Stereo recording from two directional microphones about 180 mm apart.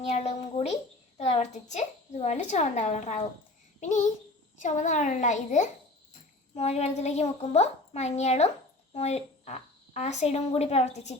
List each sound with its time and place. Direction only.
0.1 s a woman's voice: 40° left (ahead or behind)